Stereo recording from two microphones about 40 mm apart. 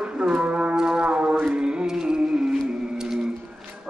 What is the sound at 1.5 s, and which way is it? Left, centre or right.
Music, right.